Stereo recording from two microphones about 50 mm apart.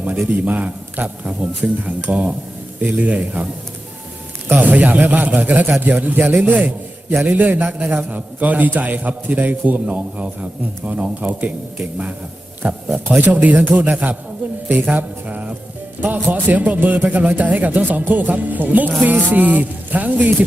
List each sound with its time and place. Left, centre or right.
0.0 s a man's voice: right
4.6 s a man's voice: right
12.6 s a man's voice: right
14.8 s mantra: right
16.0 s a man's voice: right